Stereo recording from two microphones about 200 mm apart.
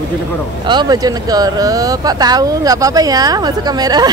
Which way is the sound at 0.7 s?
20° right (ahead or behind).